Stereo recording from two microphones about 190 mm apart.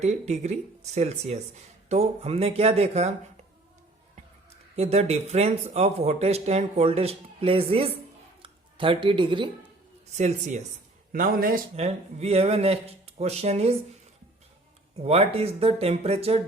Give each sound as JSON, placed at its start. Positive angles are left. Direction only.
{"t": 0.0, "sound": "speech", "side_deg": -35}
{"t": 10.1, "sound": "speech", "side_deg": -35}
{"t": 11.1, "sound": "a man's voice", "side_deg": -50}
{"t": 11.8, "sound": "speech", "side_deg": -35}
{"t": 15.0, "sound": "speech", "side_deg": -35}